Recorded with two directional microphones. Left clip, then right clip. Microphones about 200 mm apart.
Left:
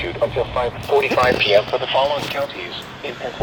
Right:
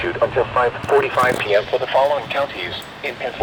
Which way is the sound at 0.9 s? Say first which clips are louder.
Left 1 dB; 30° right (ahead or behind).